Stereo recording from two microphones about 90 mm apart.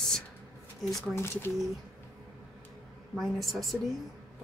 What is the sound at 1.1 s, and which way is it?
Speech, 30° left (ahead or behind).